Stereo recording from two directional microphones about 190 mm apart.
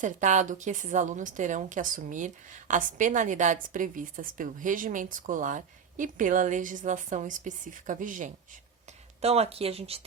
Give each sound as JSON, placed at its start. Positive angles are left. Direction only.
{"t": 0.0, "sound": "a woman's voice", "side_deg": -40}
{"t": 9.2, "sound": "speech", "side_deg": -30}